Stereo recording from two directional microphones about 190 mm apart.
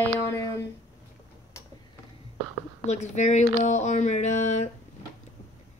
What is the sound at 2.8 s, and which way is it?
Speech, 35° left (ahead or behind).